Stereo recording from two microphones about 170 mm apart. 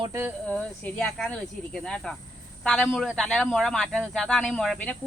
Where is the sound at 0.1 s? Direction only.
10° right (ahead or behind).